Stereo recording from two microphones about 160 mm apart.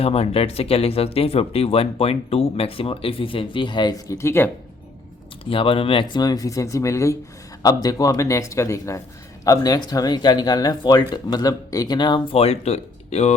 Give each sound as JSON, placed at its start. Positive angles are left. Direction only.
{"t": 0.0, "sound": "speech", "side_deg": 40}
{"t": 5.5, "sound": "speech", "side_deg": 35}